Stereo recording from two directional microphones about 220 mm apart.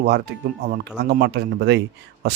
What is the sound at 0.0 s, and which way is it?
A man's voice, 45° right (ahead or behind).